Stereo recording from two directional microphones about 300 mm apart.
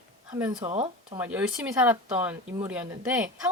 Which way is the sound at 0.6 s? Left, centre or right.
Right.